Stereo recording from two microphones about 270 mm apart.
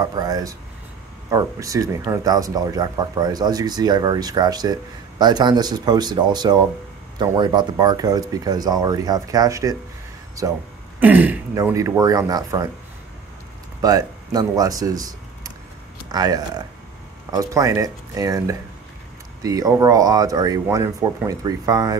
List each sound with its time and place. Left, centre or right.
0.0 s speech: centre
13.7 s speech: centre